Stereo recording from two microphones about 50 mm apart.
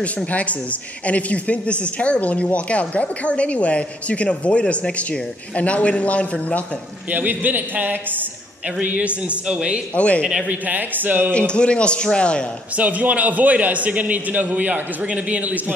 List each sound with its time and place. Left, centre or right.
0.3 s speech: left
7.1 s a man's voice: right
8.8 s a man's voice: right
9.9 s speech: left
10.5 s a man's voice: right
11.3 s speech: left
12.7 s a man's voice: right